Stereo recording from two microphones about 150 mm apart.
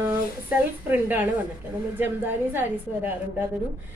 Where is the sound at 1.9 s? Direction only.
15° right (ahead or behind).